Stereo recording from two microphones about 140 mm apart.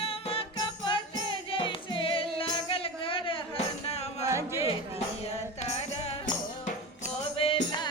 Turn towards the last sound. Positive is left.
turn(degrees=35)  # may be behind; listen again after turning